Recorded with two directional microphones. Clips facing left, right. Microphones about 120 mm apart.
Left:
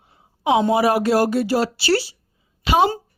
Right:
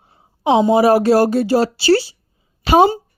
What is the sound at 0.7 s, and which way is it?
A woman's voice, 30° right (ahead or behind).